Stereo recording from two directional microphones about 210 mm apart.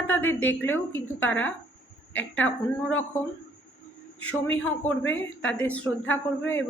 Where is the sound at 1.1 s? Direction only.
70° left (ahead or behind).